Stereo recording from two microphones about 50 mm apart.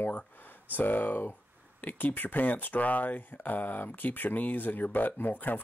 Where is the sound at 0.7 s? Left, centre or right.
Left.